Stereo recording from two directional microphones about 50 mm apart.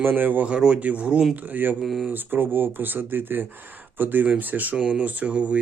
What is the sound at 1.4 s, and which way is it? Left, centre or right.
Speech, right.